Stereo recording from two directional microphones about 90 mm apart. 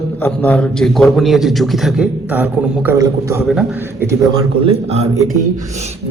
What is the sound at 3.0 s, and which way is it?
Speech, 35° right (ahead or behind).